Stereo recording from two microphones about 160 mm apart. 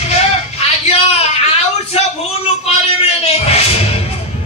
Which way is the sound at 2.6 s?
40° left (ahead or behind).